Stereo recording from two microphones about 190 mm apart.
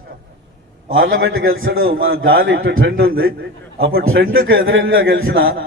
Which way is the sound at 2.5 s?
90° right.